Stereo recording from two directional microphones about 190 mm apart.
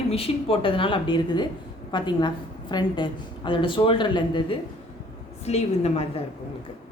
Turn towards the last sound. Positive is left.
turn(degrees=30)  # may be behind; listen again after turning